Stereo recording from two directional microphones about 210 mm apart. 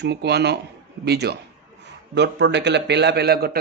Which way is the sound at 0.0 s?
50° right (ahead or behind).